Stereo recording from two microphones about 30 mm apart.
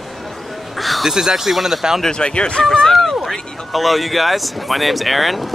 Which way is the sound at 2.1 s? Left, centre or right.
Left.